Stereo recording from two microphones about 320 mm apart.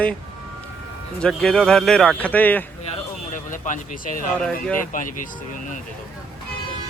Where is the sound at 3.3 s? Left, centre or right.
Left.